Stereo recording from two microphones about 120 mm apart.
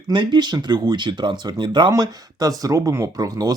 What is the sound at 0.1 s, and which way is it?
Speech, 40° right (ahead or behind).